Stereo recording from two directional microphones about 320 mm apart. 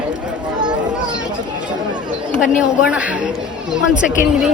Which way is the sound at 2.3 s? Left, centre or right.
Centre.